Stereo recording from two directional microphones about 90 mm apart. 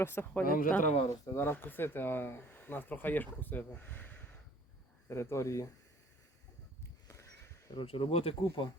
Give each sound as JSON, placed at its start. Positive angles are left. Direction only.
{"t": 0.0, "sound": "speech", "side_deg": 25}
{"t": 5.0, "sound": "speech", "side_deg": 30}
{"t": 7.1, "sound": "a sound", "side_deg": 35}
{"t": 7.8, "sound": "speech", "side_deg": 75}